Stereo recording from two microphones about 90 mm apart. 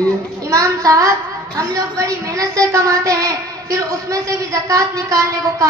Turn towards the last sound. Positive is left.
turn(degrees=-35)  # may be behind; listen again after turning